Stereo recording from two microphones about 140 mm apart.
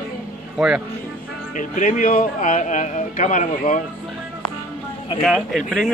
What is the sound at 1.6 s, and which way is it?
Speech, 70° left (ahead or behind).